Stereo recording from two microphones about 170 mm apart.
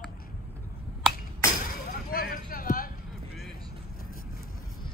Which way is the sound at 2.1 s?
60° left (ahead or behind).